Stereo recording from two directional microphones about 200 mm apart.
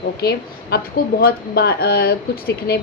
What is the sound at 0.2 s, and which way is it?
A woman's voice, 50° left (ahead or behind).